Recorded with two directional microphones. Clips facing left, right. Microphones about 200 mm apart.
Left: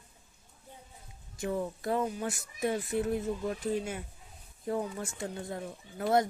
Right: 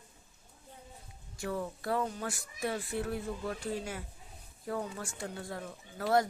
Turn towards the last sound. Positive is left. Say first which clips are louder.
# left 1 dB
turn(degrees=20)  # may be behind; listen again after turning